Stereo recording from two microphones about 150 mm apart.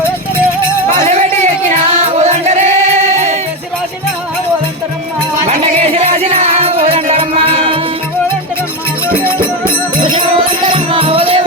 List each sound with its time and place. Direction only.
2.1 s music: 50° right (ahead or behind)
5.5 s music: 40° right (ahead or behind)
9.4 s music: 35° right (ahead or behind)